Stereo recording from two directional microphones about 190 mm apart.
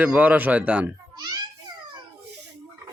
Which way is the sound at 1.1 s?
20° right (ahead or behind).